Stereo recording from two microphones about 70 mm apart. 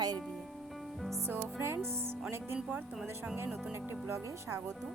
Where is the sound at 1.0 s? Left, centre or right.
Centre.